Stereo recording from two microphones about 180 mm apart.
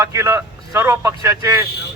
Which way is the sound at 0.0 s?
15° right (ahead or behind).